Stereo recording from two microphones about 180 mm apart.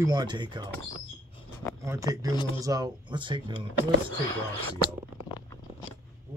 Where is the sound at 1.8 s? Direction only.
20° right (ahead or behind).